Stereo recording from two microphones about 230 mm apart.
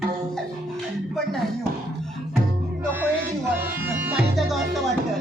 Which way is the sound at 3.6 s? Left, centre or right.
Centre.